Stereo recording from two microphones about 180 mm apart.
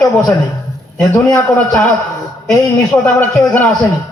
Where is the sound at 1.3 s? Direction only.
10° left (ahead or behind).